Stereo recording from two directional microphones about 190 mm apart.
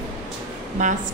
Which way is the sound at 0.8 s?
40° right (ahead or behind).